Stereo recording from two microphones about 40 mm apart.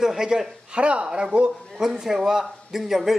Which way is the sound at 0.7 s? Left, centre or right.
Right.